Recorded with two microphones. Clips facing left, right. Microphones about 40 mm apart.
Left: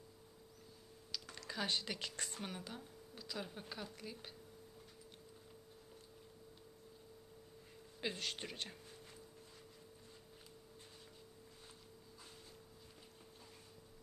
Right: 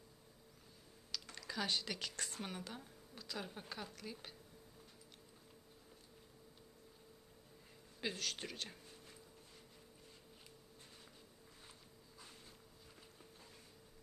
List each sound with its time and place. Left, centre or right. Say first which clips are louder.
1.1 s typing: right 1 dB; centre
1.6 s a woman's voice: left 1 dB; centre
2.4 s a woman's voice: even; centre
8.0 s speech: even; centre